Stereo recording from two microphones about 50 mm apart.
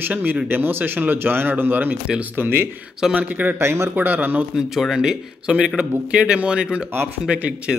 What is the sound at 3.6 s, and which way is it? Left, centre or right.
Speech, right.